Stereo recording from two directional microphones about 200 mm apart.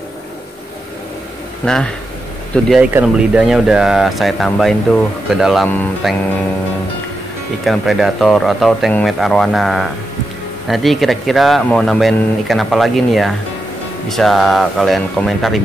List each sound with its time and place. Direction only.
1.6 s speech: 5° left (ahead or behind)
7.6 s speech: centre (ahead or behind)